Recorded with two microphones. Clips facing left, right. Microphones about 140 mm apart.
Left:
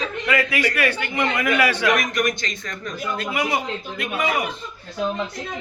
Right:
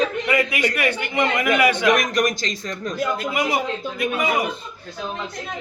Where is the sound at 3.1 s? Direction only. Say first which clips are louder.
Right 1 dB; 15° right (ahead or behind).